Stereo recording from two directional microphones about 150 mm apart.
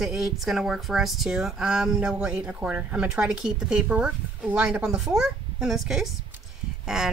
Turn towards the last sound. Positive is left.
turn(degrees=-5)  # may be behind; listen again after turning